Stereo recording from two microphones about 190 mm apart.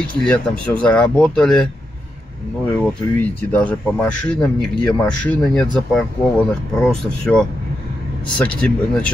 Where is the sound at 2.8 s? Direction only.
5° left (ahead or behind).